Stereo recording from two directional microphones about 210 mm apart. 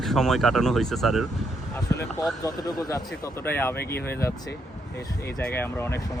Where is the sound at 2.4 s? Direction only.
15° left (ahead or behind).